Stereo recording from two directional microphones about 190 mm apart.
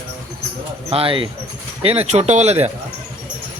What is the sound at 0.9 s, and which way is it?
Speech, 30° right (ahead or behind).